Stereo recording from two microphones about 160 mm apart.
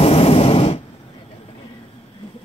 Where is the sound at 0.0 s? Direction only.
40° left (ahead or behind).